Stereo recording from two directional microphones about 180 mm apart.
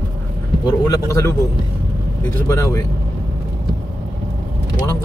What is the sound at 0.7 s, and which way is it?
Speech, 20° left (ahead or behind).